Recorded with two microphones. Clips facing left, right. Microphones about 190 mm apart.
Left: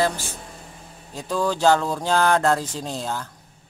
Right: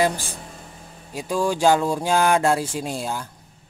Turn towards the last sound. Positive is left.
turn(degrees=-10)  # may be behind; listen again after turning